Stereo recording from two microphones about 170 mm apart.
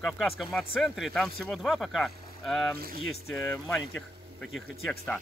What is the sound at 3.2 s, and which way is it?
Speech, 15° left (ahead or behind).